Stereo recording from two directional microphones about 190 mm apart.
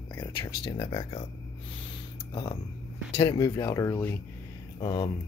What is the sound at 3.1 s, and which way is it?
Speech, 20° left (ahead or behind).